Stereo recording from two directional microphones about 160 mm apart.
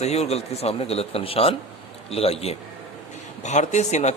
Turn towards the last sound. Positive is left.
turn(degrees=45)  # may be behind; listen again after turning